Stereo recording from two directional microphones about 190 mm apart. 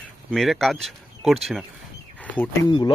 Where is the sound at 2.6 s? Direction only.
20° left (ahead or behind).